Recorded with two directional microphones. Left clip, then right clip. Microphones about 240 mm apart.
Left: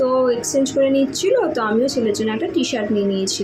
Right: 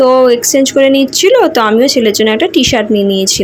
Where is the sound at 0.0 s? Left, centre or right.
Right.